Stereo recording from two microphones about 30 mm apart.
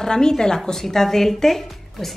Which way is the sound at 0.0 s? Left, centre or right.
Left.